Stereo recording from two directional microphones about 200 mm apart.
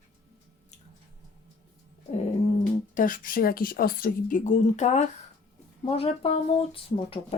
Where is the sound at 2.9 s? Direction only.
40° left (ahead or behind).